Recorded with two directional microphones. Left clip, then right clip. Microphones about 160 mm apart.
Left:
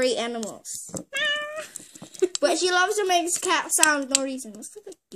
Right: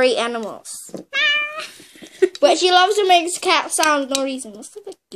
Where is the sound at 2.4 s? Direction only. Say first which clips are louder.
Right 8 dB; 45° left (ahead or behind).